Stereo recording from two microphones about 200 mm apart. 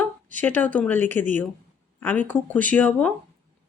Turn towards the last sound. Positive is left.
turn(degrees=5)  # may be behind; listen again after turning